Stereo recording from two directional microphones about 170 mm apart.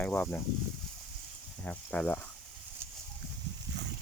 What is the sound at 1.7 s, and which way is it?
Speech, 10° left (ahead or behind).